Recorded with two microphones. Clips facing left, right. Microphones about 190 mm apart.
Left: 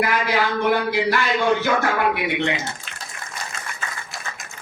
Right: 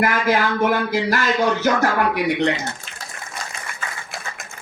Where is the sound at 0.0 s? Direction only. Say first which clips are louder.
Right 2 dB; 45° right (ahead or behind).